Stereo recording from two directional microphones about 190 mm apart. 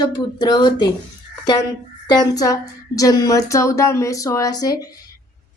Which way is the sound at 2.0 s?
20° left (ahead or behind).